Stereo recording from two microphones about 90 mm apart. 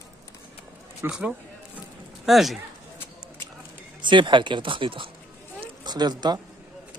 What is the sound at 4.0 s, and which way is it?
Speech, 65° right (ahead or behind).